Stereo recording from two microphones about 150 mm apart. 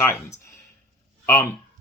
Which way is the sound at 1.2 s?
15° left (ahead or behind).